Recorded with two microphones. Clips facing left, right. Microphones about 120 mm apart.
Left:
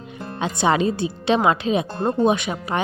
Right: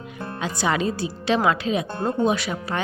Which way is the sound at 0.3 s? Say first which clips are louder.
Left 4 dB; 25° left (ahead or behind).